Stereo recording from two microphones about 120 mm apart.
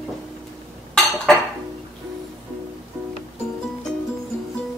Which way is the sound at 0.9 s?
Centre (ahead or behind).